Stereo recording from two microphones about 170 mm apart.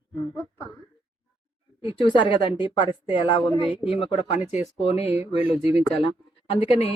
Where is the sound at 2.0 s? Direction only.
30° left (ahead or behind).